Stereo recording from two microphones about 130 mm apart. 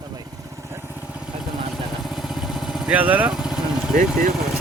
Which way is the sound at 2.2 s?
Centre (ahead or behind).